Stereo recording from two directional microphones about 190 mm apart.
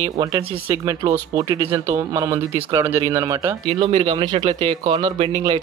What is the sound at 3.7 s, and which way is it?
A man's voice, 30° right (ahead or behind).